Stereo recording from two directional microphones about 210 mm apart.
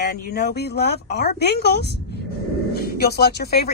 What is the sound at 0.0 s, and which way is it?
Speech, 50° left (ahead or behind).